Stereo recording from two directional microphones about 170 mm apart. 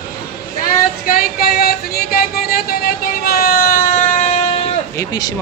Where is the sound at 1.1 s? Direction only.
60° left (ahead or behind).